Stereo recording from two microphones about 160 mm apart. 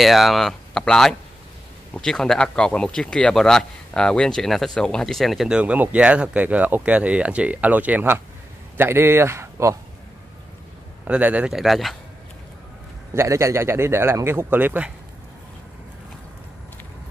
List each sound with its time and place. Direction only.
0.0 s speech: centre (ahead or behind); by 9.8 s 15° right (ahead or behind)
11.1 s speech: 10° right (ahead or behind)
13.1 s speech: 15° right (ahead or behind)